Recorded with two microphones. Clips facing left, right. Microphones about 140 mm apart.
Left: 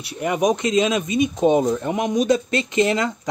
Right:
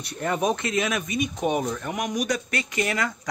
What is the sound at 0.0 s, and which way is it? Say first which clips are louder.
Speech: left 5 dB; 10° left (ahead or behind).